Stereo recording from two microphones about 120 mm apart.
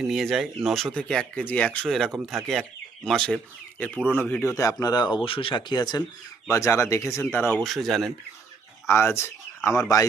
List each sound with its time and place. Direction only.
0.0 s speech: centre (ahead or behind); by 4.5 s 20° left (ahead or behind)
4.5 s speech: 30° left (ahead or behind)
5.1 s speech: 50° left (ahead or behind)
6.5 s speech: 25° left (ahead or behind)
7.6 s speech: centre (ahead or behind)
8.9 s speech: 20° left (ahead or behind)